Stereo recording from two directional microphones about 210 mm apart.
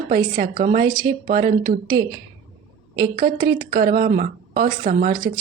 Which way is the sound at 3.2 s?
45° right (ahead or behind).